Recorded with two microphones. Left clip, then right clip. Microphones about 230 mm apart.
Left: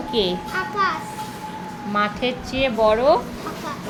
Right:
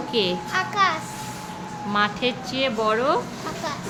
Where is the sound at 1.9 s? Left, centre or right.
Centre.